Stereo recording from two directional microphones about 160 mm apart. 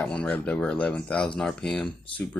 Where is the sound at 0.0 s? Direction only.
5° left (ahead or behind).